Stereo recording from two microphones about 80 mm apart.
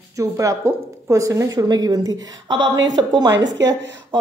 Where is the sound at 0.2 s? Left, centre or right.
Right.